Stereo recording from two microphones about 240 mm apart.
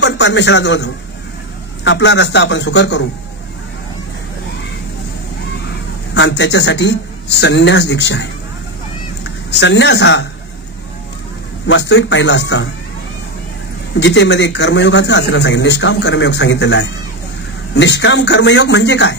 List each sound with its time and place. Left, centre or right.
0.0 s a man's voice: left
1.9 s speech: left
6.1 s speech: left
9.5 s speech: left
11.6 s speech: left
13.9 s speech: left